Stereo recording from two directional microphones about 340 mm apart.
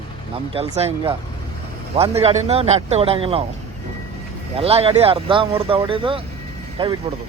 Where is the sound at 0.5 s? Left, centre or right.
Centre.